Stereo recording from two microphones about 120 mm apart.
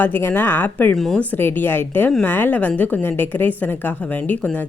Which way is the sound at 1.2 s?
15° left (ahead or behind).